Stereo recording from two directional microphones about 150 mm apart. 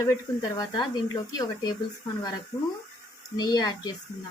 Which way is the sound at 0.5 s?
30° left (ahead or behind).